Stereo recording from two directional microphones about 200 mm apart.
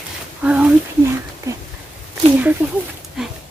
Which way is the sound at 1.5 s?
15° right (ahead or behind).